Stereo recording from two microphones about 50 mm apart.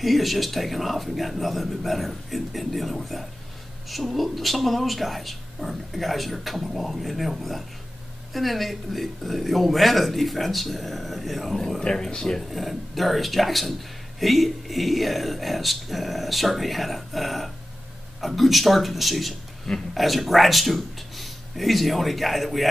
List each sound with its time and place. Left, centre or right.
0.0 s speech: centre
11.8 s speech: centre
12.4 s a man's voice: centre